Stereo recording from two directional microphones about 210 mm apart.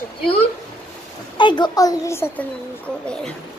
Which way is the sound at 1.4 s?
20° left (ahead or behind).